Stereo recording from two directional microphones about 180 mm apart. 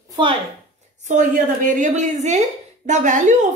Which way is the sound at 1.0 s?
45° right (ahead or behind).